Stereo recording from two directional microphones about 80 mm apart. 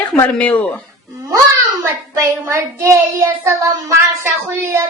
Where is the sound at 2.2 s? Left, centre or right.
Right.